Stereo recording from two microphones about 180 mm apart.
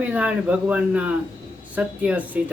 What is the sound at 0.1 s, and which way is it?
Speech, 10° right (ahead or behind).